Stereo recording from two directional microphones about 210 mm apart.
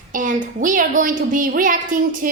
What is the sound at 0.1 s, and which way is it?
Speech, 40° right (ahead or behind).